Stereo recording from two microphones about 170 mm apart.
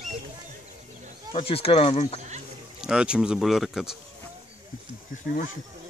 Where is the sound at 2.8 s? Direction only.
5° right (ahead or behind).